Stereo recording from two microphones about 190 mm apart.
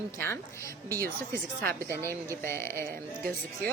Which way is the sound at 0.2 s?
15° left (ahead or behind).